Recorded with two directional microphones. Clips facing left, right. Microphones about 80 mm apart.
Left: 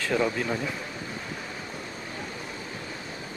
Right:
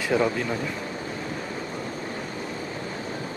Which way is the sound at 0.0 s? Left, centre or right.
Centre.